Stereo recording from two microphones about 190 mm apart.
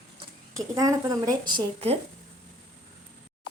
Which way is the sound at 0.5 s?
15° right (ahead or behind).